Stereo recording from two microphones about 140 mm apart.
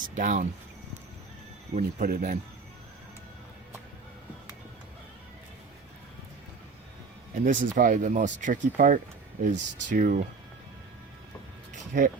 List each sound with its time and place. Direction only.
0.1 s speech: 60° right (ahead or behind)
1.7 s speech: 70° right (ahead or behind)
7.3 s speech: 70° right (ahead or behind)
11.7 s a sound: 70° right (ahead or behind)